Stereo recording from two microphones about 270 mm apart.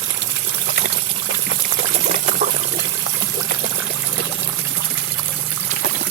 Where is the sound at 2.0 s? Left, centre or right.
Right.